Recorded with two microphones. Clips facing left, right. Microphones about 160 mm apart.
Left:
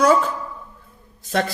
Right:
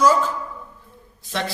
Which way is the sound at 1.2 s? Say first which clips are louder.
Left 6 dB; 45° left (ahead or behind).